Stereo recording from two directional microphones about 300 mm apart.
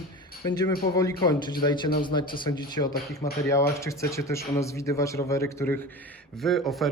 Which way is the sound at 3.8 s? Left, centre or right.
Centre.